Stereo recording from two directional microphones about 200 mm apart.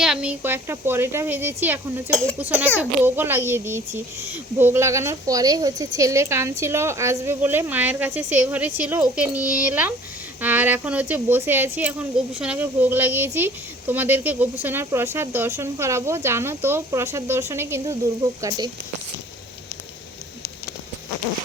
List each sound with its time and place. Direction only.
0.0 s speech: 5° right (ahead or behind)
2.0 s speech: 5° left (ahead or behind)
2.4 s speech: 10° right (ahead or behind)